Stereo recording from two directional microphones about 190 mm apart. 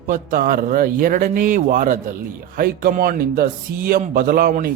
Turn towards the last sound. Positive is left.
turn(degrees=-45)  # may be behind; listen again after turning